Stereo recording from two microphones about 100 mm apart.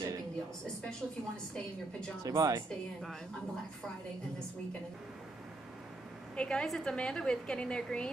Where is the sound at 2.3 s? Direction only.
35° right (ahead or behind).